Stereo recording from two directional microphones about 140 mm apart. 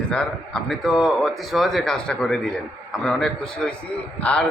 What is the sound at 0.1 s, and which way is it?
A man's voice, 5° left (ahead or behind).